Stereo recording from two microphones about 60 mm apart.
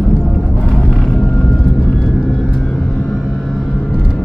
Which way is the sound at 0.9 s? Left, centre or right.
Centre.